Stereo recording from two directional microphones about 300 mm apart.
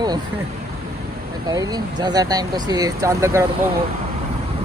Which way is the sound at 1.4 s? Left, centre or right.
Centre.